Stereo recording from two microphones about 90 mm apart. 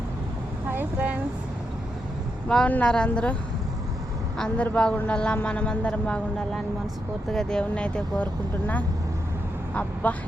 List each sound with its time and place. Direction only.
0.7 s a sound: 20° right (ahead or behind)
2.6 s speech: 15° left (ahead or behind)
4.4 s speech: 10° left (ahead or behind)